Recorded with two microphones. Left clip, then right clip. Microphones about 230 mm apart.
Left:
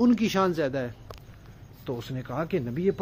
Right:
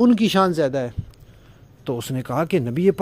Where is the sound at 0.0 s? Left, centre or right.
Right.